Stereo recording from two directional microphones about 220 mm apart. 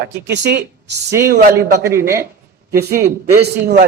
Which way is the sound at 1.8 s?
10° right (ahead or behind).